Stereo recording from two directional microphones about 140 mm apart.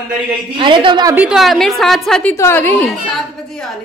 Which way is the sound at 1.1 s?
5° right (ahead or behind).